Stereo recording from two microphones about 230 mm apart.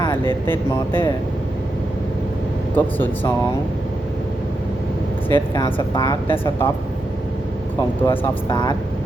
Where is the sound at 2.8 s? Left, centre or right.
Centre.